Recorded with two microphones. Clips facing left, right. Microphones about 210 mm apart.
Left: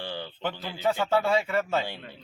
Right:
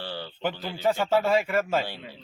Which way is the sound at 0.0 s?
15° left (ahead or behind).